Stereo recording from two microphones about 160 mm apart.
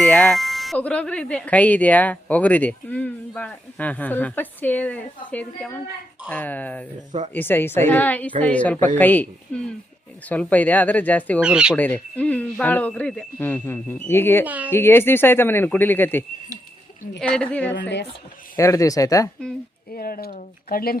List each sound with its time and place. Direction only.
0.0 s speech: 5° left (ahead or behind)
11.3 s speech: 5° right (ahead or behind)
11.8 s speech: 10° left (ahead or behind)
14.4 s a woman's voice: 10° right (ahead or behind)
14.7 s speech: 15° left (ahead or behind)
17.7 s speech: 90° left
18.5 s speech: 20° left (ahead or behind)
19.9 s speech: 70° left (ahead or behind)